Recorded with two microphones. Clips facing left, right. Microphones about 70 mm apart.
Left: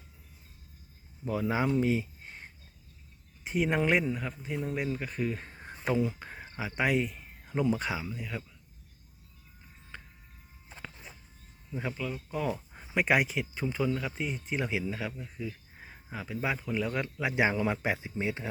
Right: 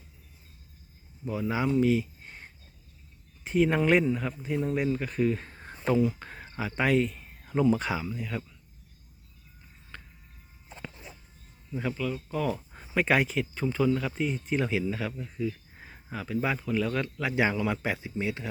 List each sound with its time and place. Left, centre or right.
1.3 s speech: left
1.5 s speech: left
2.2 s a sound: centre
3.4 s speech: centre
6.1 s cricket: centre
6.6 s speech: centre
9.9 s vehicle: centre
11.7 s speech: centre
12.5 s a sound: centre
12.9 s speech: centre